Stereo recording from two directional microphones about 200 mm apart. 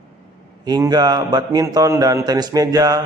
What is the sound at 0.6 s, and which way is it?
A man's voice, 20° right (ahead or behind).